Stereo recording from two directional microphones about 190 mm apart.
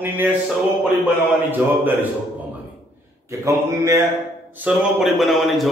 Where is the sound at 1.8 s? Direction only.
10° right (ahead or behind).